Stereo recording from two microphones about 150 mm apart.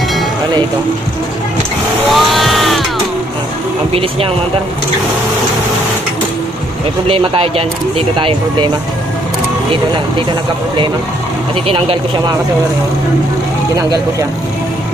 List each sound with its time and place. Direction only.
2.0 s a sound: centre (ahead or behind)
7.1 s speech: 40° right (ahead or behind)
11.6 s speech: 35° right (ahead or behind)